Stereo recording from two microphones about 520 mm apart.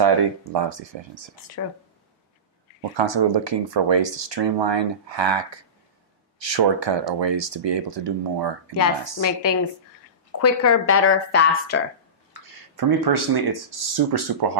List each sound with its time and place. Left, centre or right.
0.0 s speech: right
1.6 s speech: left
3.0 s speech: right
9.2 s speech: left
12.7 s speech: right